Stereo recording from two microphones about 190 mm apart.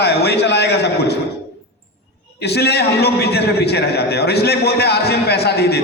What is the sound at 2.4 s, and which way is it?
A man's voice, 60° left (ahead or behind).